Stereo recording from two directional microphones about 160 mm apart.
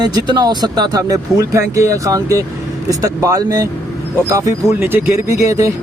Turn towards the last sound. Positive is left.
turn(degrees=-20)  # may be behind; listen again after turning